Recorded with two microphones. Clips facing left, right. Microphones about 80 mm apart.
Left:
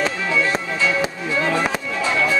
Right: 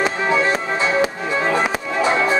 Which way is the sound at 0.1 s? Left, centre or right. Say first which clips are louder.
Right 3 dB; right.